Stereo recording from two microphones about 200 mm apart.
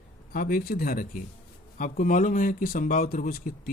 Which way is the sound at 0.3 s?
45° left (ahead or behind).